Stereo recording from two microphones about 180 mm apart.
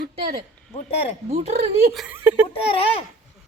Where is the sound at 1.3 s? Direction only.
35° right (ahead or behind).